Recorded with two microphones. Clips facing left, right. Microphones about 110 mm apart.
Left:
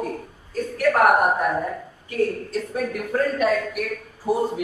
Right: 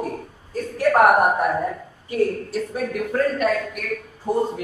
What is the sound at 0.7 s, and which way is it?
Speech, 25° right (ahead or behind).